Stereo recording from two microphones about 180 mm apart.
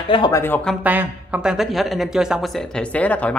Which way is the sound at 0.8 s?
10° right (ahead or behind).